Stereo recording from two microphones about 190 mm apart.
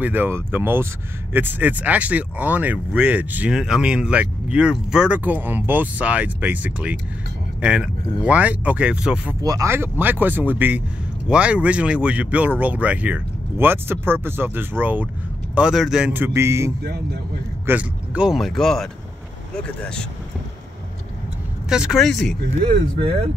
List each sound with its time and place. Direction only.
0.0 s speech: 10° right (ahead or behind)
9.4 s speech: 20° right (ahead or behind)
16.8 s speech: 55° right (ahead or behind)
17.6 s speech: 5° right (ahead or behind)
21.6 s speech: 5° right (ahead or behind)